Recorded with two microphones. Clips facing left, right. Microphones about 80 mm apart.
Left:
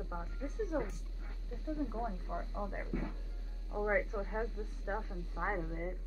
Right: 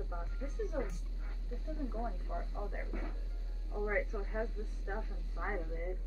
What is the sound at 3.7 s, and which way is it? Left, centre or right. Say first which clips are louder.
Speech: left 2 dB; left.